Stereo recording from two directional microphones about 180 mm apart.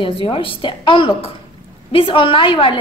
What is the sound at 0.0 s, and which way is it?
A woman's voice, 30° left (ahead or behind).